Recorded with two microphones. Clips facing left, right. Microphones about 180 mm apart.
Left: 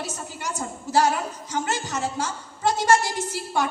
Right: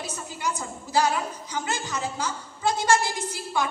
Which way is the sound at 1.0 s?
45° left (ahead or behind).